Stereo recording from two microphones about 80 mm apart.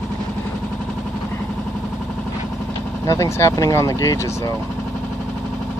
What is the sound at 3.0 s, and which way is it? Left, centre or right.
Speech, left.